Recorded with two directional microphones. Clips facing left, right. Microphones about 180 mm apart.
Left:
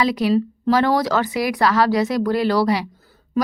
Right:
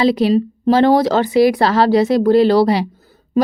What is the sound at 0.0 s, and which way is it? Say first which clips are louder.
Speech: right 4 dB; 30° right (ahead or behind).